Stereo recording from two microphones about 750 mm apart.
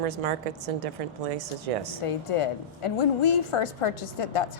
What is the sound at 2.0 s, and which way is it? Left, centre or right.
A woman's voice, left.